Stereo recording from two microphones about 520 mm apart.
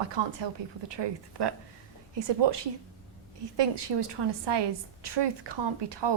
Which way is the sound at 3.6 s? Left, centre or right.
Right.